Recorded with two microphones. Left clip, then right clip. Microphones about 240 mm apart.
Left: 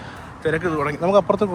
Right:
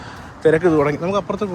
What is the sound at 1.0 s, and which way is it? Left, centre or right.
Speech, centre.